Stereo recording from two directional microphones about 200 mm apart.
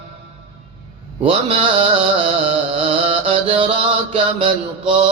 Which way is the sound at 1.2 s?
25° right (ahead or behind).